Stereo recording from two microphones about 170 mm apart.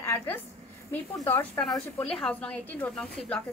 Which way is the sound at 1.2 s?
15° left (ahead or behind).